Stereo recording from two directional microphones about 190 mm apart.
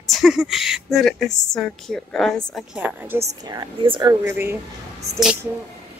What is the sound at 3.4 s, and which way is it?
Speech, 25° right (ahead or behind).